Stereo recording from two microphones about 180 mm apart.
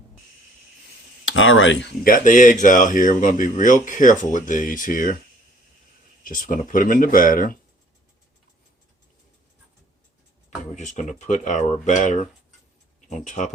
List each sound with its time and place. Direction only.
1.2 s speech: 90° left
2.0 s speech: 45° left (ahead or behind)
6.2 s speech: 50° left (ahead or behind)
10.8 s speech: 40° left (ahead or behind)